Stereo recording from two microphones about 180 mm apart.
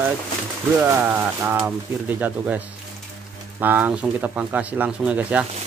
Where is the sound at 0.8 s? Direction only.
10° right (ahead or behind).